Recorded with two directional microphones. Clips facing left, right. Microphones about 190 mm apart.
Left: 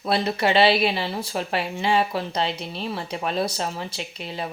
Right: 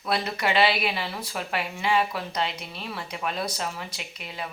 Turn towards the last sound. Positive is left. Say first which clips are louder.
# left 5 dB
turn(degrees=30)  # may be behind; listen again after turning